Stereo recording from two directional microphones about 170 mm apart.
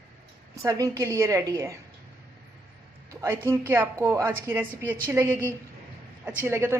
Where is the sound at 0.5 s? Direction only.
20° right (ahead or behind).